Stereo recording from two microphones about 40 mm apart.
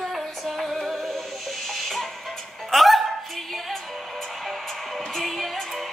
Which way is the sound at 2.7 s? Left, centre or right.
Centre.